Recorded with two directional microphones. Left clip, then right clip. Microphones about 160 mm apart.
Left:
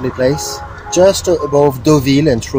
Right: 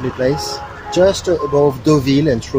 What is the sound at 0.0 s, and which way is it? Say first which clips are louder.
Speech: left 3 dB; 20° left (ahead or behind).